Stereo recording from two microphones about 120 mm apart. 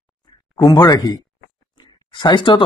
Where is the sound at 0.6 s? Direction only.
35° left (ahead or behind).